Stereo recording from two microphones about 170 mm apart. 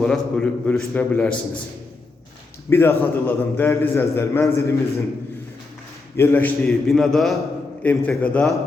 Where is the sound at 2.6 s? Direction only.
15° left (ahead or behind).